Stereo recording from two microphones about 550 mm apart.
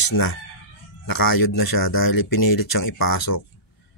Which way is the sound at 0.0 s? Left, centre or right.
Left.